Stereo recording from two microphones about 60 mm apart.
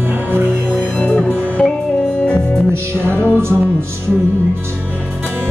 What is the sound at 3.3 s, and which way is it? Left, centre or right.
Music, right.